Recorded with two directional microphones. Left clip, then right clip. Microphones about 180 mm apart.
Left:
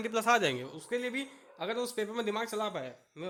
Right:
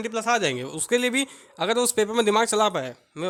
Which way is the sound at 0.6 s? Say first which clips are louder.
Right 12 dB; 40° right (ahead or behind).